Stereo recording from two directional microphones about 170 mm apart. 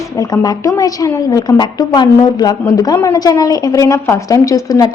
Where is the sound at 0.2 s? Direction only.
20° left (ahead or behind).